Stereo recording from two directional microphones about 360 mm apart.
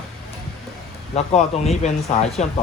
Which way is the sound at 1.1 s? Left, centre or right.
Centre.